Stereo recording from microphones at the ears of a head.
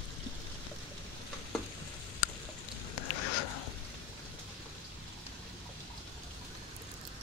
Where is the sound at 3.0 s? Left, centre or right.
Left.